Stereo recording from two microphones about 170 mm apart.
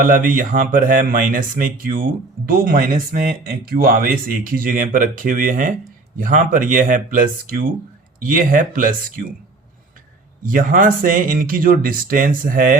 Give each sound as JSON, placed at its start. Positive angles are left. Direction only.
{"t": 0.0, "sound": "speech", "side_deg": -55}
{"t": 10.4, "sound": "speech", "side_deg": -55}